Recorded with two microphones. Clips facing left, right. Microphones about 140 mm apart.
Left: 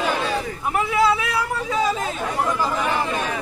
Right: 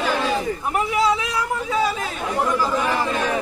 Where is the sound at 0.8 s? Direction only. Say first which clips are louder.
Left 2 dB; 15° right (ahead or behind).